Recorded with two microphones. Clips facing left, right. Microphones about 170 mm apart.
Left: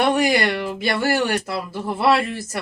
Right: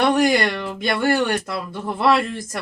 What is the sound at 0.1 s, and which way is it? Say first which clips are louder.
Speech: right 1 dB; 5° left (ahead or behind).